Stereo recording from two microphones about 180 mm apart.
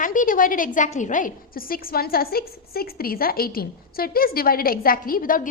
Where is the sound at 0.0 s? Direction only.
45° left (ahead or behind).